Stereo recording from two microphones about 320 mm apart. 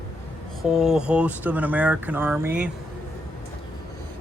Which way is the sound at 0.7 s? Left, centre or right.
Centre.